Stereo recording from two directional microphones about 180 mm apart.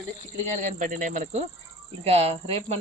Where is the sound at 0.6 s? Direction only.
45° right (ahead or behind).